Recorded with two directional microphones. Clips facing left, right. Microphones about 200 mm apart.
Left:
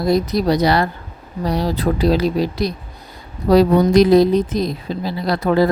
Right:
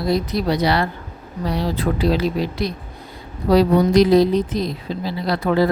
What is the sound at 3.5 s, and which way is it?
A woman's voice, 50° left (ahead or behind).